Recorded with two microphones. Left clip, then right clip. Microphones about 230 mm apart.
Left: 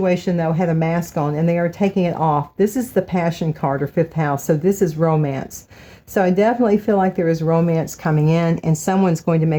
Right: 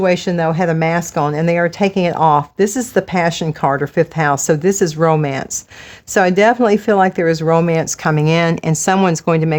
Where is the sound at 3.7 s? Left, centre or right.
Right.